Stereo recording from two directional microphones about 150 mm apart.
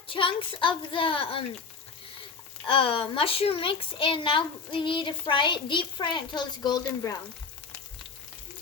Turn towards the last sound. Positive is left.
turn(degrees=30)  # may be behind; listen again after turning